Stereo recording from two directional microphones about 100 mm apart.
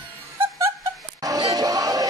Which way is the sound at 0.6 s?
35° right (ahead or behind).